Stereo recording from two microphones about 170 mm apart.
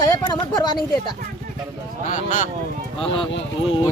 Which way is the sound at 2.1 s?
50° left (ahead or behind).